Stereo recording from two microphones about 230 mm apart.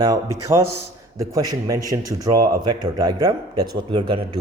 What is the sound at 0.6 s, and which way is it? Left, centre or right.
Speech, right.